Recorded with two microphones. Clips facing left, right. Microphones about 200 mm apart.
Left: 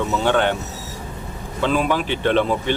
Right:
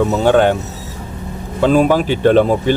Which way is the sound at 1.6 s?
40° right (ahead or behind).